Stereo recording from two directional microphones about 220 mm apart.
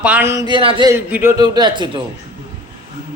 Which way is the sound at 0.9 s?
5° right (ahead or behind).